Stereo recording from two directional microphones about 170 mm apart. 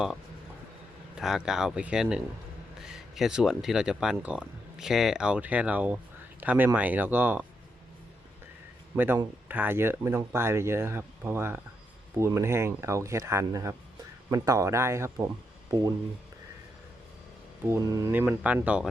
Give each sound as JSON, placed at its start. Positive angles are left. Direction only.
{"t": 1.2, "sound": "speech", "side_deg": -5}
{"t": 9.0, "sound": "speech", "side_deg": -10}
{"t": 17.7, "sound": "speech", "side_deg": -20}